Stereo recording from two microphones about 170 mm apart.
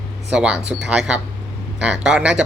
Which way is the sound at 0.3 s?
5° right (ahead or behind).